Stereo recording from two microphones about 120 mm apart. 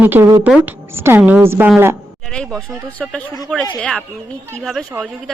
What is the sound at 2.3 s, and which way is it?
Speech, 5° left (ahead or behind).